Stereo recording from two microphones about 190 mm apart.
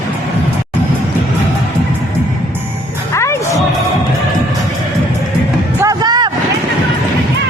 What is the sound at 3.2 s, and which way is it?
Music, 15° left (ahead or behind).